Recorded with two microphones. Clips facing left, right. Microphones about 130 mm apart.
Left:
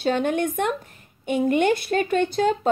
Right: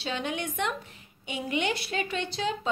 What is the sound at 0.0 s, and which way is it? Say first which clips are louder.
A woman's voice: left 10 dB; 50° left (ahead or behind).